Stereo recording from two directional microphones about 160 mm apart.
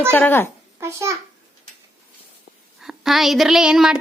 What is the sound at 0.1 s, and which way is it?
Speech, 10° left (ahead or behind).